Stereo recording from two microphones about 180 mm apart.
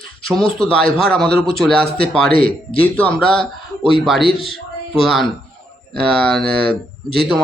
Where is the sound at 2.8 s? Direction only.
5° left (ahead or behind).